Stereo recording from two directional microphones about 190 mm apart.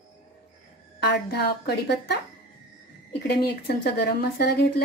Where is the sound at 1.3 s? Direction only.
55° left (ahead or behind).